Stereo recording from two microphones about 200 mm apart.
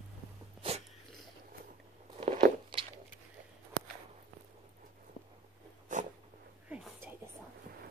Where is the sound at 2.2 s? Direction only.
35° right (ahead or behind).